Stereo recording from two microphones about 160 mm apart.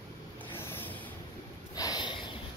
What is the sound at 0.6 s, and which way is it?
Vehicle, 15° left (ahead or behind).